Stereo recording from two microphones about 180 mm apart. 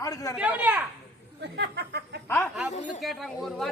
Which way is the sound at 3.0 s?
Centre (ahead or behind).